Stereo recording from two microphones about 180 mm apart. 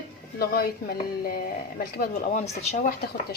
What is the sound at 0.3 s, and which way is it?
Speech, 60° left (ahead or behind).